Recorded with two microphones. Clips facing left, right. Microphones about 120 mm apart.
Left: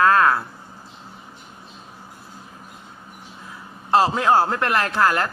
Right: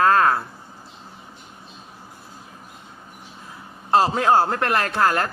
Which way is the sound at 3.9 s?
35° right (ahead or behind).